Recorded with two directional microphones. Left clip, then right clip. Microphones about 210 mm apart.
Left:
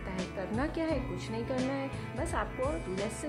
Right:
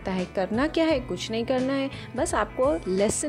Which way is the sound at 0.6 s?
30° right (ahead or behind).